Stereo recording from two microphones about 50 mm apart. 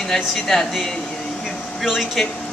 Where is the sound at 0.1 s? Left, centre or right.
Centre.